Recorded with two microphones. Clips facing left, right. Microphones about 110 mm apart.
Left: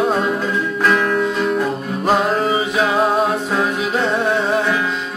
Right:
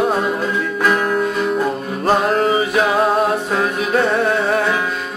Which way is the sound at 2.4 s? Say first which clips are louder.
Right 2 dB; 20° left (ahead or behind).